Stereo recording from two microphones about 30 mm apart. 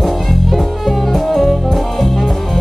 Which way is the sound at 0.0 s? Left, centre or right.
Centre.